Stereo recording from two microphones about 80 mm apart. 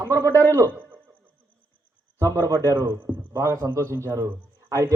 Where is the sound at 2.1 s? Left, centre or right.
Right.